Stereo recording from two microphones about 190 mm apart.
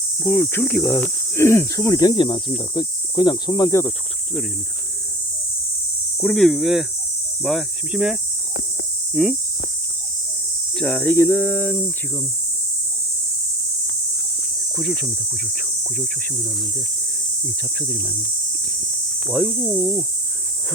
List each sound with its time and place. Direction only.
0.2 s speech: 10° left (ahead or behind)
6.1 s cricket: 5° left (ahead or behind)
10.8 s speech: 10° left (ahead or behind)
14.8 s cricket: centre (ahead or behind)
17.7 s cricket: 5° left (ahead or behind)
19.3 s cricket: 5° left (ahead or behind)